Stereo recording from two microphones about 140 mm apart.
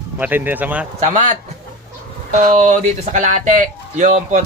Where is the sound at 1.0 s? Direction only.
60° right (ahead or behind).